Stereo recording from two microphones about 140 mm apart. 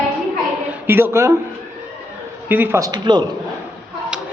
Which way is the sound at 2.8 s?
25° right (ahead or behind).